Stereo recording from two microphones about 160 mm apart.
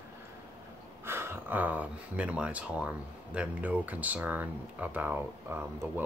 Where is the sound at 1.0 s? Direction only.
15° right (ahead or behind).